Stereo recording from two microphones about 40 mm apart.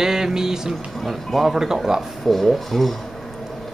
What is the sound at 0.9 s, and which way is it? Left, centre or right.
Speech, centre.